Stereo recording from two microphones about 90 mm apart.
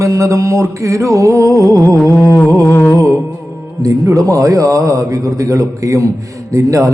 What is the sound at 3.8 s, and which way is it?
A man's voice, 40° right (ahead or behind).